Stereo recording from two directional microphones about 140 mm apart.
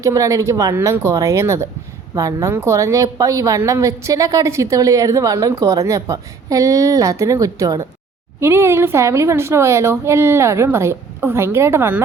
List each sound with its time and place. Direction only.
0.0 s a woman's voice: 20° right (ahead or behind)